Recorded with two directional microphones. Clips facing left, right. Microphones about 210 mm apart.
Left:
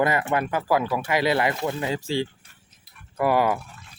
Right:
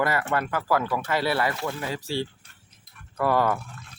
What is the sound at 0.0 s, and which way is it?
Speech, 20° left (ahead or behind).